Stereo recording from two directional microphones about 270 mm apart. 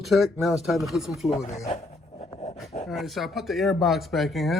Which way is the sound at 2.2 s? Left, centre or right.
Left.